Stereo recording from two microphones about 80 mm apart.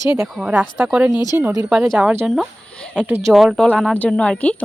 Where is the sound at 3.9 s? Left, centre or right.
Centre.